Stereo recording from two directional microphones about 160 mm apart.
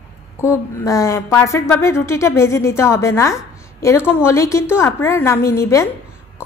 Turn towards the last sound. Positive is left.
turn(degrees=20)  # may be behind; listen again after turning